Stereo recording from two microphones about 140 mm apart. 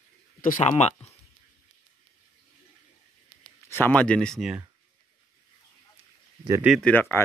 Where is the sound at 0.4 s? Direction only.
80° left.